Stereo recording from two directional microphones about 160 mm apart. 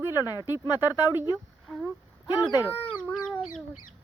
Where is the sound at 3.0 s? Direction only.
Centre (ahead or behind).